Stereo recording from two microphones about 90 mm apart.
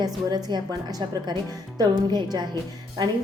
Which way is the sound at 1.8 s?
50° right (ahead or behind).